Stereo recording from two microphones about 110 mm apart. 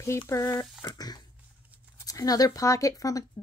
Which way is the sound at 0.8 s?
35° left (ahead or behind).